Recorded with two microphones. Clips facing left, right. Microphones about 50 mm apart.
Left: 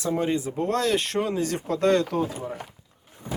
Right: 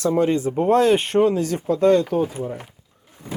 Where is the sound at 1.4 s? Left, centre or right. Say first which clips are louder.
Right 5 dB; left.